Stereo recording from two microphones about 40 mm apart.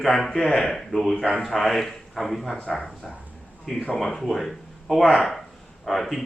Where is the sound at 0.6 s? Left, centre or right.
Centre.